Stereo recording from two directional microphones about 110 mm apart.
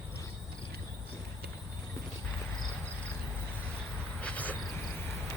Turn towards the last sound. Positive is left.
turn(degrees=15)  # may be behind; listen again after turning